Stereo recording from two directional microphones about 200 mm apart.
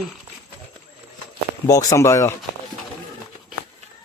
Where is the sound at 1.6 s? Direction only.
15° left (ahead or behind).